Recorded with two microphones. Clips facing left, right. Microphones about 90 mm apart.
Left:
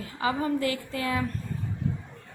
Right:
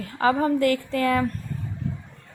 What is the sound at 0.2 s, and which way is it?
A woman's voice, 55° right (ahead or behind).